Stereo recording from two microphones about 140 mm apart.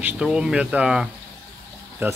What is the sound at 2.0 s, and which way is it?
Speech, 15° right (ahead or behind).